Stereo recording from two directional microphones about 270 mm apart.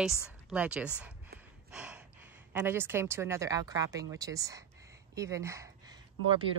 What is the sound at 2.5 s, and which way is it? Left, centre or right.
Speech, centre.